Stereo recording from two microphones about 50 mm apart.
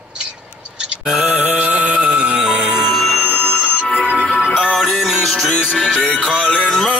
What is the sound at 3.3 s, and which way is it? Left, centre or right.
Music, centre.